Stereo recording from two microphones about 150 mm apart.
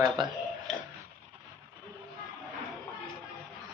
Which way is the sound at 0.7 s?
5° left (ahead or behind).